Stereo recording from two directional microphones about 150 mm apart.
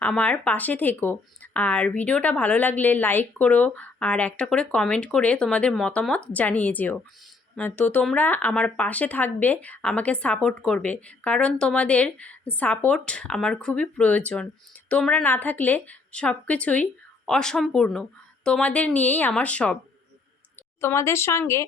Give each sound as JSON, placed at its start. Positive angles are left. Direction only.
{"t": 0.0, "sound": "speech", "side_deg": 10}